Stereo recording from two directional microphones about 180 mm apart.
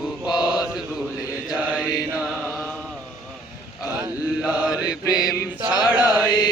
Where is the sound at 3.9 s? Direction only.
10° right (ahead or behind).